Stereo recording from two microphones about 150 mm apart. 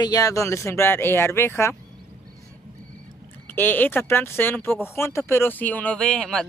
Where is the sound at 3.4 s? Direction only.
10° left (ahead or behind).